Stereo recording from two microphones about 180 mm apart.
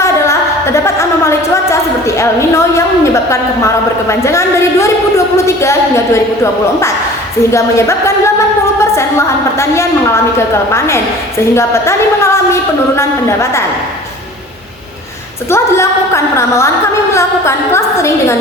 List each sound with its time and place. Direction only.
0.0 s a sound: 15° left (ahead or behind)
4.1 s a woman's voice: 15° left (ahead or behind)
15.4 s a woman's voice: 15° left (ahead or behind)